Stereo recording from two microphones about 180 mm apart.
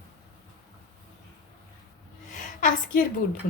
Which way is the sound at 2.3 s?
45° left (ahead or behind).